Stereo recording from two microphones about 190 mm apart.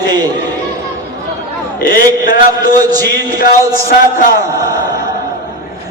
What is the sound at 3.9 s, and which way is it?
Speech, 50° left (ahead or behind).